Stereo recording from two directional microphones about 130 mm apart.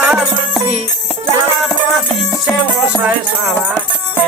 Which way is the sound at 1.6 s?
Centre (ahead or behind).